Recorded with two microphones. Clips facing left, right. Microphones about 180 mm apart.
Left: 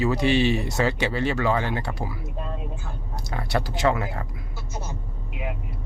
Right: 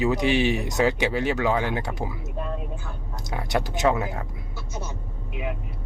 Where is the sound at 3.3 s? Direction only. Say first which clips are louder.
Right 1 dB; 20° right (ahead or behind).